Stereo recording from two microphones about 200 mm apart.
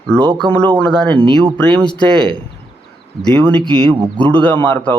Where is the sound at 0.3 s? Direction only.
20° right (ahead or behind).